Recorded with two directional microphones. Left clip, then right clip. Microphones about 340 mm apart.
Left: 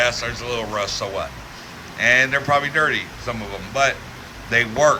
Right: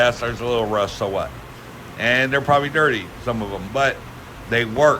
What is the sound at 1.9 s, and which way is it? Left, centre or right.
A man's voice, centre.